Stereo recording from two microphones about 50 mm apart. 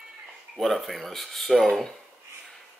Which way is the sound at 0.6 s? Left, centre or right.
Centre.